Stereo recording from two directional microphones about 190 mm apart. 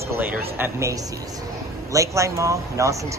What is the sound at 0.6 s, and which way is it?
Speech, 15° right (ahead or behind).